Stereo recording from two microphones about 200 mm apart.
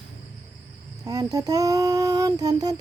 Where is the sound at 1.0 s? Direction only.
20° right (ahead or behind).